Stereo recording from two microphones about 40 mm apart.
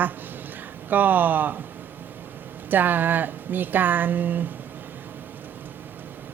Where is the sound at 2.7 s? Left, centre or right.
Right.